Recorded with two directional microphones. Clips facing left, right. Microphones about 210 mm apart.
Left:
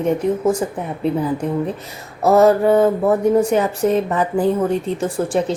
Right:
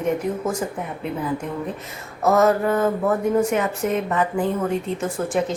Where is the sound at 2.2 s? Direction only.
30° left (ahead or behind).